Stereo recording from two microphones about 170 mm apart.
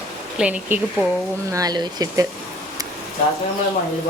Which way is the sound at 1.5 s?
25° right (ahead or behind).